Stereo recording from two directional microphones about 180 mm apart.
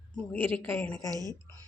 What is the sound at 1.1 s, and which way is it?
Speech, 20° right (ahead or behind).